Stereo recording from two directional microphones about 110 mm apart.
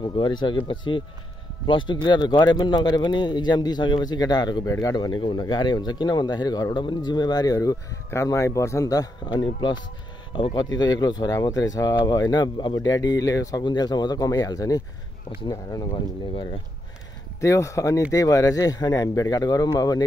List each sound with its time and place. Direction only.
0.0 s a man's voice: 45° left (ahead or behind)
17.4 s a man's voice: 30° left (ahead or behind)